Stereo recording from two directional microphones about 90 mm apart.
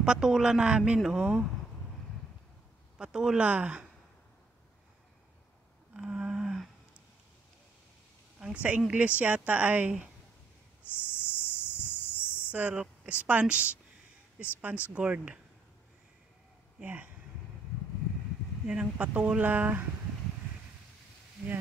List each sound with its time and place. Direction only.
0.0 s a woman's voice: 10° right (ahead or behind)
3.0 s a woman's voice: 10° right (ahead or behind)
5.9 s a sound: 10° right (ahead or behind)
8.6 s a woman's voice: 15° right (ahead or behind)
11.0 s a sound: 25° left (ahead or behind)
12.4 s a sound: 15° right (ahead or behind)
13.0 s a woman's voice: 15° right (ahead or behind)
16.8 s speech: 20° right (ahead or behind)
18.7 s a woman's voice: 15° right (ahead or behind)